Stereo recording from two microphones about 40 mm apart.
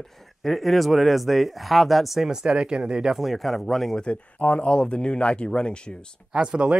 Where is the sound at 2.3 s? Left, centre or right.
Centre.